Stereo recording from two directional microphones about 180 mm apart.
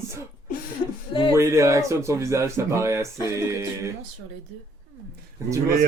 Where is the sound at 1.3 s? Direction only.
15° right (ahead or behind).